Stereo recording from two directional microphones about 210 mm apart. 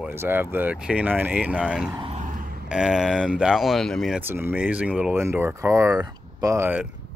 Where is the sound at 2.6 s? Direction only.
5° right (ahead or behind).